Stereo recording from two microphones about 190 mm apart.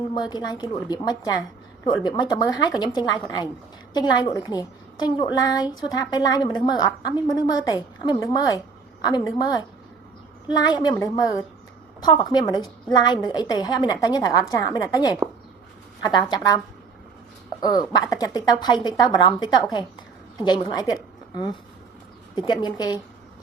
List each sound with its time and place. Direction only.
0.1 s a woman's voice: 20° left (ahead or behind)
15.2 s a sound: 5° right (ahead or behind)
16.0 s a woman's voice: 20° left (ahead or behind)
17.6 s a woman's voice: 20° left (ahead or behind)